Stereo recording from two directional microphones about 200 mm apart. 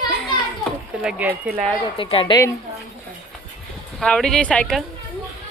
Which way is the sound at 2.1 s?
30° left (ahead or behind).